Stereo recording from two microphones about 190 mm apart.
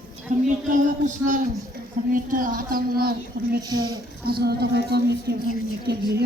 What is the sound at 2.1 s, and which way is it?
A man's voice, 45° right (ahead or behind).